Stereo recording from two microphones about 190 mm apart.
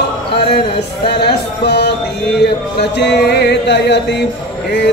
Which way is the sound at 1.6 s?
60° left (ahead or behind).